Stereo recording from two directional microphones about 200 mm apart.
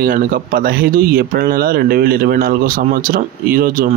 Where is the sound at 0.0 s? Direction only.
45° right (ahead or behind).